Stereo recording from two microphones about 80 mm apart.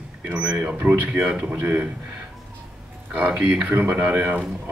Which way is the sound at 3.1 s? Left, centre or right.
Centre.